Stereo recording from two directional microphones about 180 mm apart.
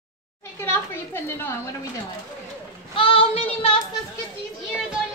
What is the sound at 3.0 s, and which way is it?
Speech, 30° left (ahead or behind).